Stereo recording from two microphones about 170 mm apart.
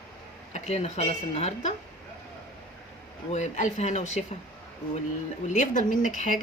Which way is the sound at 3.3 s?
45° left (ahead or behind).